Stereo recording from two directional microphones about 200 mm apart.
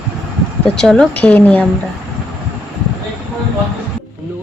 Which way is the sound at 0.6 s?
5° left (ahead or behind).